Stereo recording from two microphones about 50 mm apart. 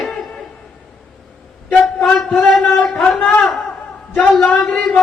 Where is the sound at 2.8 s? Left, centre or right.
Left.